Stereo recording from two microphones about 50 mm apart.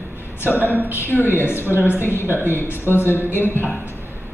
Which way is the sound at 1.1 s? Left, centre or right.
Left.